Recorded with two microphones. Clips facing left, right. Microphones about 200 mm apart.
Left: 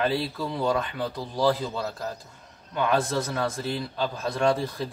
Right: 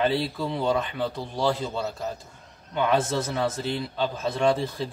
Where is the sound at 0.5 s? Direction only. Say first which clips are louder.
Even; 25° right (ahead or behind).